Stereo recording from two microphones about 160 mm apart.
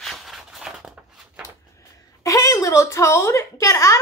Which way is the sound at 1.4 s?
20° left (ahead or behind).